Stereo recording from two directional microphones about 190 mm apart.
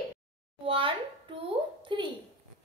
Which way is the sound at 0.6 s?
30° right (ahead or behind).